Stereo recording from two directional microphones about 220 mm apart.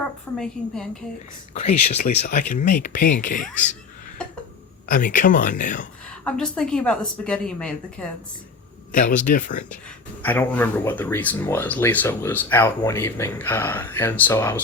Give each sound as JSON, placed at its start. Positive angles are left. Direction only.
{"t": 0.0, "sound": "speech", "side_deg": 5}
{"t": 1.6, "sound": "speech", "side_deg": 30}
{"t": 4.2, "sound": "cough", "side_deg": 5}
{"t": 4.9, "sound": "speech", "side_deg": 35}
{"t": 6.1, "sound": "speech", "side_deg": 5}
{"t": 8.9, "sound": "speech", "side_deg": 35}
{"t": 10.2, "sound": "speech", "side_deg": 10}